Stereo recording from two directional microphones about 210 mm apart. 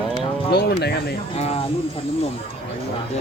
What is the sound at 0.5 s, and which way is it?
Speech, 50° left (ahead or behind).